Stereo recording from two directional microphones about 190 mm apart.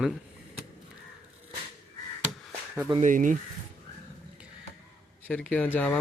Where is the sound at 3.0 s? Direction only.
45° right (ahead or behind).